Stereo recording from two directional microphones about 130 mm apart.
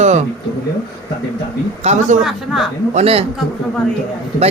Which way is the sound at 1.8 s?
60° right (ahead or behind).